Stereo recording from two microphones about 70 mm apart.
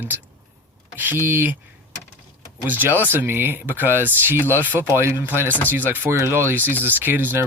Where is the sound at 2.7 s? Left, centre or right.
Right.